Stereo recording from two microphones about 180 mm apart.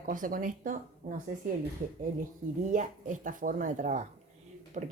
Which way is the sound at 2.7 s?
45° right (ahead or behind).